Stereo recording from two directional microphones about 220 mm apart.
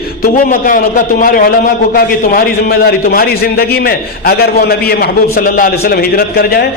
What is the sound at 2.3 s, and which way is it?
A man's voice, 40° left (ahead or behind).